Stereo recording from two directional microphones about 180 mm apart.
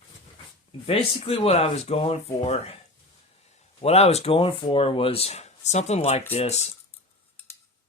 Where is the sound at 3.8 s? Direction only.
35° left (ahead or behind).